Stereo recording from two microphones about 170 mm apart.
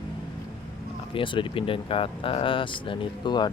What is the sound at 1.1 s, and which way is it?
Speech, 30° left (ahead or behind).